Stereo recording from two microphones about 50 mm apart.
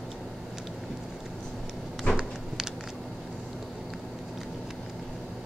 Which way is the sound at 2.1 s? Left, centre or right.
Left.